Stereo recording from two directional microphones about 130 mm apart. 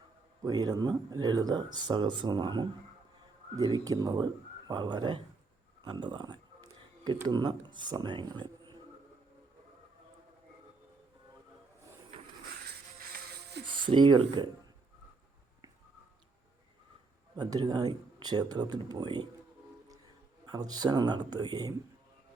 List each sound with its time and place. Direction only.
0.4 s speech: 30° right (ahead or behind)
13.7 s speech: 40° right (ahead or behind)
17.3 s speech: 35° right (ahead or behind)
20.4 s speech: 30° right (ahead or behind)